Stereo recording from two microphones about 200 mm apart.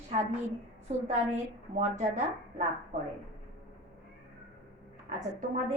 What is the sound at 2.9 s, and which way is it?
Speech, 40° right (ahead or behind).